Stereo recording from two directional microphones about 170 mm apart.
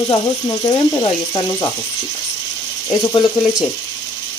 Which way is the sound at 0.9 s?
25° left (ahead or behind).